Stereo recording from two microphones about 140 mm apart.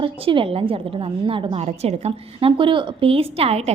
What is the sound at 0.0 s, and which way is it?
A woman's voice, 35° right (ahead or behind).